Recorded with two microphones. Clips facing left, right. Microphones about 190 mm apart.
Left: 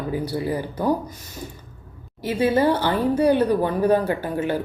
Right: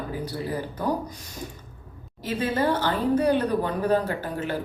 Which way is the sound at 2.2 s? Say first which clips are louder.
Left 6 dB; 10° left (ahead or behind).